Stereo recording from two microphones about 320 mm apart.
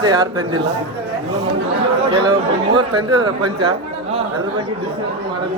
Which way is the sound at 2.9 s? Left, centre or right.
Centre.